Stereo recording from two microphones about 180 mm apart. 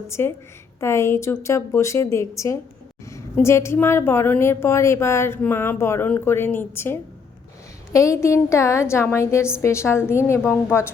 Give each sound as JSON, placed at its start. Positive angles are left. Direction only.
{"t": 0.1, "sound": "a woman's voice", "side_deg": 15}